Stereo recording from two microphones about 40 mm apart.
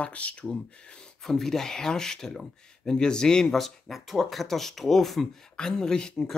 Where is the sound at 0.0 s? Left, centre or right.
Left.